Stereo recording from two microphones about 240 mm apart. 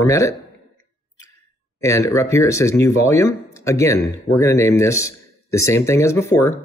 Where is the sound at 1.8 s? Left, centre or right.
Centre.